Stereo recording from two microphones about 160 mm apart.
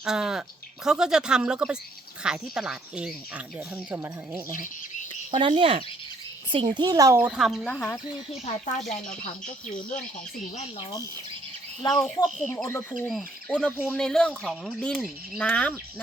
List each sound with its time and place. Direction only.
0.0 s speech: 5° right (ahead or behind)
5.4 s a child's voice: 35° right (ahead or behind)
7.2 s speech: 5° right (ahead or behind)
11.8 s speech: 25° left (ahead or behind)
12.0 s speech: centre (ahead or behind)